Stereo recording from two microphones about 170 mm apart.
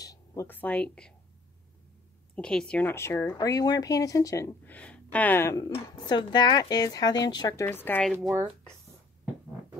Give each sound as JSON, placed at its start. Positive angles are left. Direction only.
{"t": 0.0, "sound": "speech", "side_deg": 20}
{"t": 2.3, "sound": "speech", "side_deg": 5}
{"t": 8.3, "sound": "speech", "side_deg": -15}